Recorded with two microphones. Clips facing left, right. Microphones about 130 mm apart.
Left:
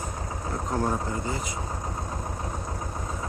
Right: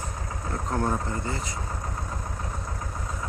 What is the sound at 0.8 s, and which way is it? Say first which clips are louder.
Speech: even; 5° left (ahead or behind).